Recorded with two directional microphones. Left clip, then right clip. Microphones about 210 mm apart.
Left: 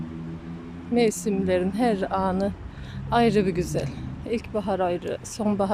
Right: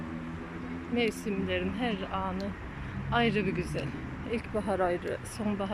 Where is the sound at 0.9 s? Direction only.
20° left (ahead or behind).